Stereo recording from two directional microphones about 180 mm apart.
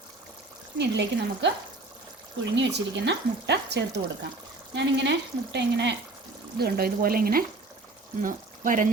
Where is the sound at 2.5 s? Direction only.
75° right (ahead or behind).